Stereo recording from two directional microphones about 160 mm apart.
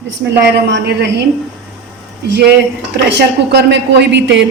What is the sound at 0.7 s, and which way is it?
Speech, 90° right.